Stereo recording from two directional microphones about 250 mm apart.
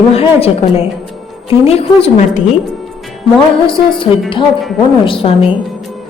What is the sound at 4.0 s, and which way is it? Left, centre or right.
A woman's voice, centre.